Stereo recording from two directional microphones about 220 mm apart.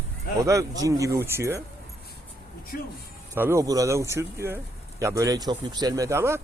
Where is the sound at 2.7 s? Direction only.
45° left (ahead or behind).